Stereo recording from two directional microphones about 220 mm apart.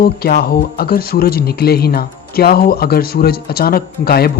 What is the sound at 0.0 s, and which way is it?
Speech, 45° left (ahead or behind).